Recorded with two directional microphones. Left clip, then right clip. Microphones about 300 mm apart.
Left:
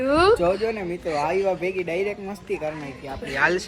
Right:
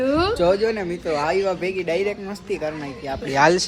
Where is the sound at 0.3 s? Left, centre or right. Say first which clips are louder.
Right 4 dB; centre.